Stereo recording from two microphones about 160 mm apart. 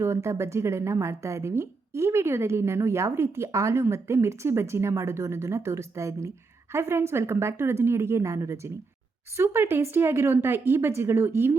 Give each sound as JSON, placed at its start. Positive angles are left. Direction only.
{"t": 0.0, "sound": "a woman's voice", "side_deg": -15}